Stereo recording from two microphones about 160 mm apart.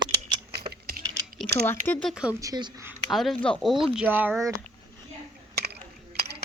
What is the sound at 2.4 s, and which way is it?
Speech, 25° right (ahead or behind).